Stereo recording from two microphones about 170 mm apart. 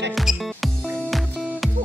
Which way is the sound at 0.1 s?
Centre (ahead or behind).